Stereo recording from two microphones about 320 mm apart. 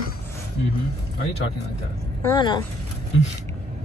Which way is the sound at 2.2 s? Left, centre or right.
Centre.